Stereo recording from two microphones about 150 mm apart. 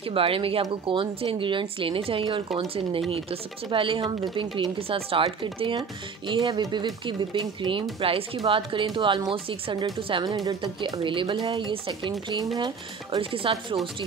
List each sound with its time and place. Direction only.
0.0 s speech: 40° right (ahead or behind)